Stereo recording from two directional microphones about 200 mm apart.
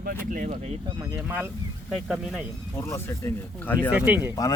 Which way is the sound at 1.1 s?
10° right (ahead or behind).